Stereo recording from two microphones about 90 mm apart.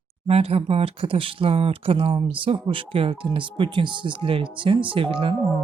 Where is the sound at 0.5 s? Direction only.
90° right.